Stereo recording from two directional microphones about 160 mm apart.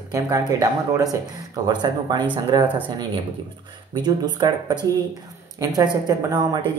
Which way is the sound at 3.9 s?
25° right (ahead or behind).